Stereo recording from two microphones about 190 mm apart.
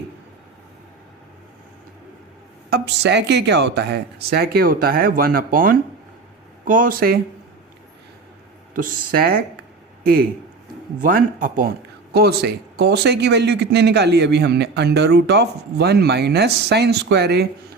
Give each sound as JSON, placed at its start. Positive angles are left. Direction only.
{"t": 2.6, "sound": "speech", "side_deg": -60}
{"t": 8.7, "sound": "speech", "side_deg": -50}
{"t": 12.1, "sound": "speech", "side_deg": -55}